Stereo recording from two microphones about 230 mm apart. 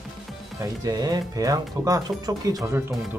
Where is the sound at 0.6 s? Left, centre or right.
Centre.